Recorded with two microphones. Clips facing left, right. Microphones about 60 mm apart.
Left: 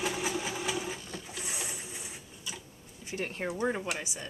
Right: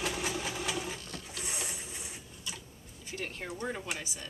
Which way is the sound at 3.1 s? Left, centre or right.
Centre.